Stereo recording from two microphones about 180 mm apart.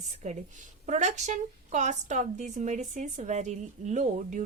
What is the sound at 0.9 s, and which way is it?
Speech, 40° right (ahead or behind).